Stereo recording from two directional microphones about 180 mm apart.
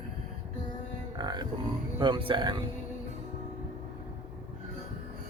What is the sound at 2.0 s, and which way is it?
Speech, 30° right (ahead or behind).